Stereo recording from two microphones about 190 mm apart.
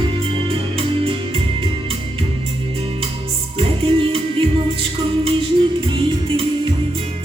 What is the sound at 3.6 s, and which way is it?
Music, 30° right (ahead or behind).